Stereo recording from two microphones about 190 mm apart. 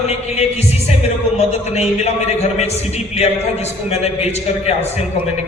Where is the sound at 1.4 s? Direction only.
35° left (ahead or behind).